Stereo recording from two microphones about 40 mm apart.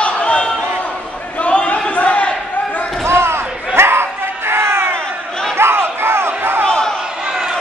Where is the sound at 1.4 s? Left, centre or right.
Left.